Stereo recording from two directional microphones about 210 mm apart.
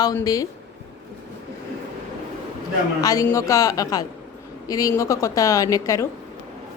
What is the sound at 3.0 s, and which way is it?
Speech, 15° left (ahead or behind).